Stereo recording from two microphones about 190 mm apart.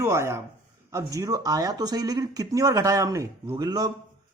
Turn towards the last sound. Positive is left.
turn(degrees=-20)  # may be behind; listen again after turning